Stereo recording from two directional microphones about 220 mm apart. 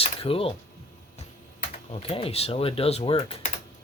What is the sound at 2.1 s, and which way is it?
Speech, 25° left (ahead or behind).